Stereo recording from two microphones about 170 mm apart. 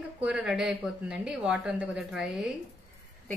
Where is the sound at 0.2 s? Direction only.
5° right (ahead or behind).